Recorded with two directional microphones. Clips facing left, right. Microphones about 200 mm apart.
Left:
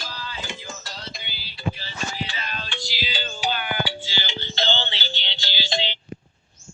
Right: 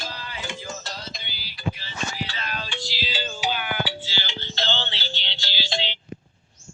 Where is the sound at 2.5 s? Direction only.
10° right (ahead or behind).